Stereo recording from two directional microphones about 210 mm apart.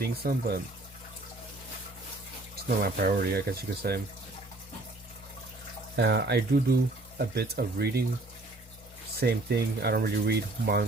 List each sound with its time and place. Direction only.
0.0 s speech: 45° right (ahead or behind)
2.6 s speech: 45° right (ahead or behind)
6.0 s speech: 55° right (ahead or behind)
9.2 s speech: 50° right (ahead or behind)